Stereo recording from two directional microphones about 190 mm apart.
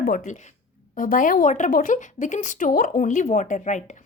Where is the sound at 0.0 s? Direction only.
50° left (ahead or behind).